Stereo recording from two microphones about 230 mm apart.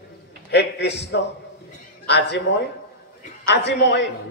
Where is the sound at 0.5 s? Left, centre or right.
Left.